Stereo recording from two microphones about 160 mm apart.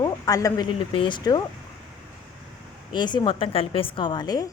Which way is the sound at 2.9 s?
30° left (ahead or behind).